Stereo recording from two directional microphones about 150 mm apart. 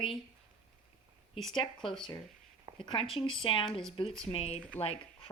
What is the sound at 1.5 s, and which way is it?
Speech, 30° left (ahead or behind).